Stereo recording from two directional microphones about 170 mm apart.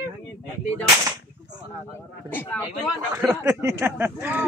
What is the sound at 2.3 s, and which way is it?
Speech, 10° left (ahead or behind).